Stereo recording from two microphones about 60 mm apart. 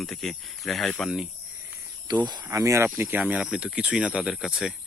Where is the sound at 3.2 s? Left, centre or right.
Right.